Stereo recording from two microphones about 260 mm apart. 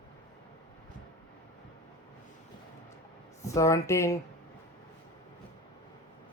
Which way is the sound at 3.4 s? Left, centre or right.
Centre.